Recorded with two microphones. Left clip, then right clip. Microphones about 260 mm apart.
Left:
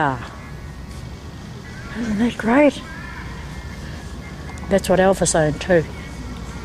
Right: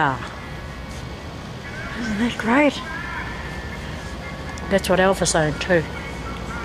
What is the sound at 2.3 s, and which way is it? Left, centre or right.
Speech, centre.